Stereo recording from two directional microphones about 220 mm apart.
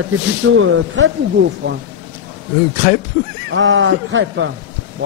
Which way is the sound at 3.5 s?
60° right (ahead or behind).